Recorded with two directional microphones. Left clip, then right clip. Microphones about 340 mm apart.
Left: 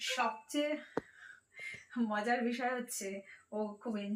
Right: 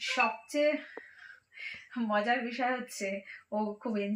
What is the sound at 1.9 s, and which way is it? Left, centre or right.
Speech, right.